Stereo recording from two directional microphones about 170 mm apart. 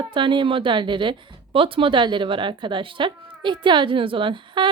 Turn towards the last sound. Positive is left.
turn(degrees=-30)  # may be behind; listen again after turning